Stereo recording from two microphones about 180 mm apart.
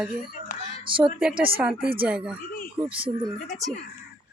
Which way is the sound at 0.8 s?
30° right (ahead or behind).